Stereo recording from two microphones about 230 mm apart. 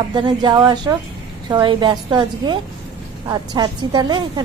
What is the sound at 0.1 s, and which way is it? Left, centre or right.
A woman's voice, centre.